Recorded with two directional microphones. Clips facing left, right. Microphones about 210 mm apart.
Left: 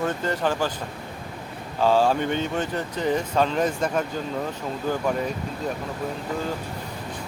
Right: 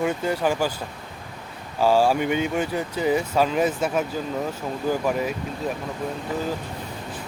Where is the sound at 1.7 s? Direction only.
10° right (ahead or behind).